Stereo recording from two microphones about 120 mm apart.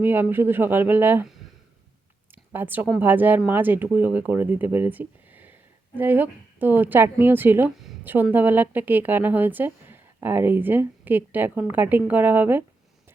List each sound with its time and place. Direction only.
0.0 s a woman's voice: 15° right (ahead or behind)
2.3 s a woman's voice: 15° right (ahead or behind)